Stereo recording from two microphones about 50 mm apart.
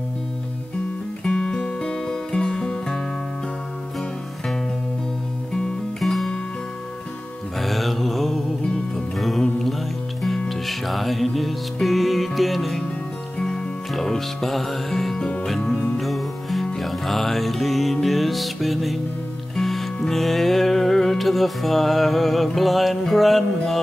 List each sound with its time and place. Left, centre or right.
1.2 s music: centre
5.5 s music: centre
7.5 s mantra: centre
8.6 s music: centre